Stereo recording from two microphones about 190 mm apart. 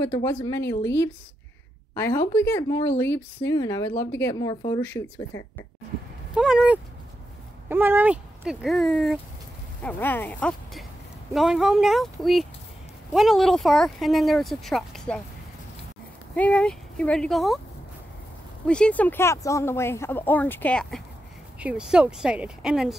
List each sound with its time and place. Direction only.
0.0 s speech: 15° left (ahead or behind)
2.0 s speech: 10° left (ahead or behind)
4.8 s speech: 10° left (ahead or behind)
6.3 s speech: 5° right (ahead or behind)
9.8 s speech: 10° left (ahead or behind)
16.3 s speech: 5° left (ahead or behind)
18.7 s speech: 5° left (ahead or behind)
21.5 s speech: 5° right (ahead or behind)